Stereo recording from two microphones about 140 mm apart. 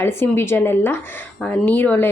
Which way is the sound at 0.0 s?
15° left (ahead or behind).